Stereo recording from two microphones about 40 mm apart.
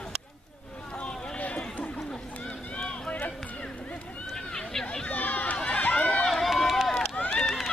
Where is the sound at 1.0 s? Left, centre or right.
Left.